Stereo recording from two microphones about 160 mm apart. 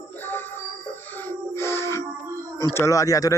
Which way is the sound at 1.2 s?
15° left (ahead or behind).